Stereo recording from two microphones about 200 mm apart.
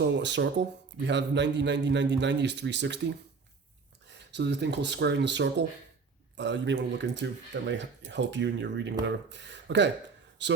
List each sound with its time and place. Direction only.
0.0 s speech: 60° right (ahead or behind)
4.3 s speech: 60° right (ahead or behind)